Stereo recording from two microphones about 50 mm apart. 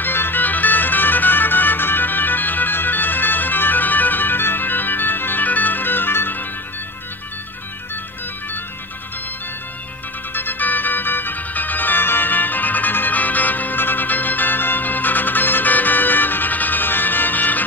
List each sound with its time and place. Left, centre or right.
0.0 s music: left
10.3 s music: left